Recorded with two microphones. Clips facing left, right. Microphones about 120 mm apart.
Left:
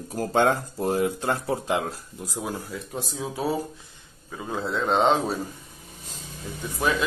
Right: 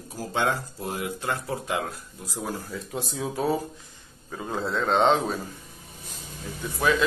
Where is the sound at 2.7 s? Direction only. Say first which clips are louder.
Right 1 dB; centre (ahead or behind).